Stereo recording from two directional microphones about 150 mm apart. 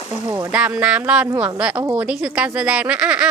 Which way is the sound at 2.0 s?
10° right (ahead or behind).